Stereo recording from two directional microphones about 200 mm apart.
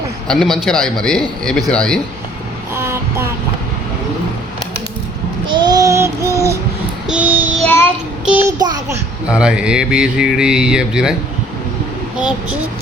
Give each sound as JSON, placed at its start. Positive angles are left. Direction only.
{"t": 0.3, "sound": "speech", "side_deg": 0}
{"t": 2.7, "sound": "child singing", "side_deg": -10}
{"t": 5.5, "sound": "child singing", "side_deg": -20}
{"t": 7.6, "sound": "child singing", "side_deg": 10}
{"t": 8.4, "sound": "a child's voice", "side_deg": -20}
{"t": 9.2, "sound": "speech", "side_deg": -5}
{"t": 12.1, "sound": "speech", "side_deg": -5}